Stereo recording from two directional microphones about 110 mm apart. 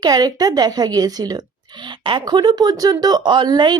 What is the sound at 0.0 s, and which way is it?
A woman's voice, 40° right (ahead or behind).